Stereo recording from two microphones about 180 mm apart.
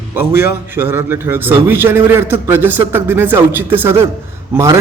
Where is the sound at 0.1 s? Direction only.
15° right (ahead or behind).